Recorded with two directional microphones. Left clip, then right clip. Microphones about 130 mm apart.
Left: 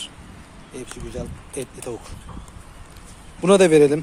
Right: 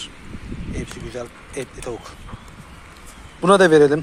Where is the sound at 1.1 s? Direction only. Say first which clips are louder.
Right 2 dB; 5° left (ahead or behind).